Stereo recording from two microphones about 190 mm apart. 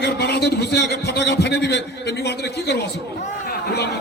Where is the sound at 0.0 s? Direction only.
60° left (ahead or behind).